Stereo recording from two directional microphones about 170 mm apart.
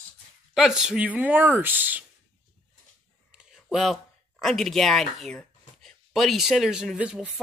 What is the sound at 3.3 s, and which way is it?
Speech, 5° right (ahead or behind).